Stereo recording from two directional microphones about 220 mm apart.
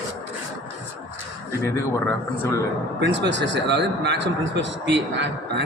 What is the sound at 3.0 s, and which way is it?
A man's voice, 55° right (ahead or behind).